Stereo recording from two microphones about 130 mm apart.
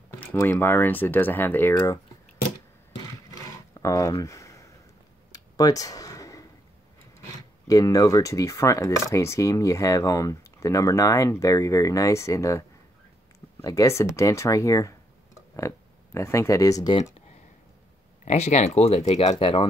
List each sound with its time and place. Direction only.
0.2 s speech: 15° left (ahead or behind)
3.8 s a sound: 25° left (ahead or behind)
7.6 s speech: 25° left (ahead or behind)
18.2 s speech: 60° left (ahead or behind)
19.4 s speech: 45° left (ahead or behind)